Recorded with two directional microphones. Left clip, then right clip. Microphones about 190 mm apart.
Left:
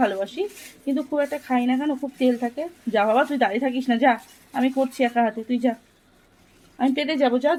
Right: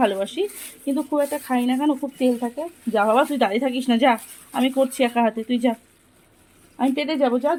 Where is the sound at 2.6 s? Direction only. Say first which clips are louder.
Right 1 dB; centre (ahead or behind).